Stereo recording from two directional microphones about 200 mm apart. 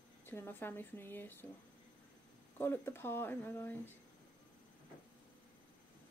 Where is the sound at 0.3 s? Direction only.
10° left (ahead or behind).